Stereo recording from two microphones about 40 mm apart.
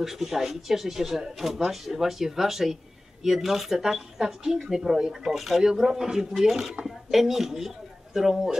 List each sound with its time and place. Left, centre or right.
0.0 s speech: centre
5.3 s speech: centre